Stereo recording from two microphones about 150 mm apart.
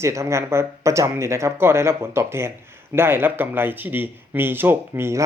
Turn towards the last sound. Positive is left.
turn(degrees=-15)  # may be behind; listen again after turning